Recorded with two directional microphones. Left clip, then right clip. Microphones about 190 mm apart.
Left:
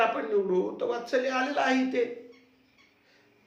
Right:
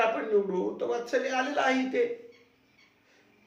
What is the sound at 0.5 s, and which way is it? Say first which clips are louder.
A man's voice: left 2 dB; 25° left (ahead or behind).